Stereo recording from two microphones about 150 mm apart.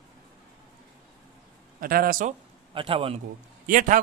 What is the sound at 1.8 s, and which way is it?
Speech, 75° right (ahead or behind).